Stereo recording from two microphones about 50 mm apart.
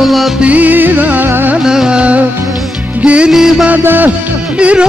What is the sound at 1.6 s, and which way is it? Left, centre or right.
Music, centre.